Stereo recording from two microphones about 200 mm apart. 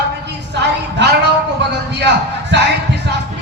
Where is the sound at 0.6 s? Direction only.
60° right (ahead or behind).